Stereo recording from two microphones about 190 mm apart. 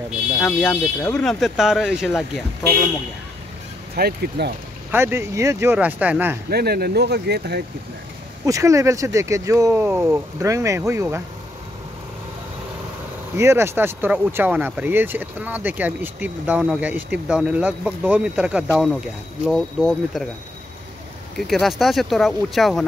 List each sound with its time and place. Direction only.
0.4 s speech: 5° left (ahead or behind)
3.9 s speech: 55° right (ahead or behind)
4.9 s speech: 15° right (ahead or behind)
6.5 s speech: 55° right (ahead or behind)
8.5 s speech: 15° right (ahead or behind)
13.4 s speech: 15° right (ahead or behind)
21.4 s speech: centre (ahead or behind)